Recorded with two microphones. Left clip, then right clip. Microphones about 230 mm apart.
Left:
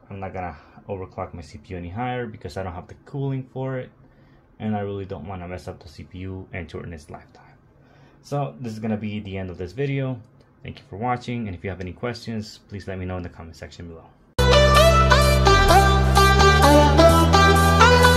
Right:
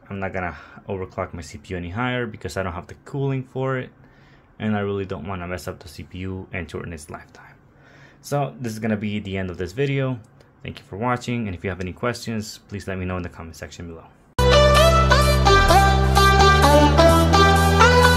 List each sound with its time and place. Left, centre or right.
0.1 s speech: right
14.3 s music: centre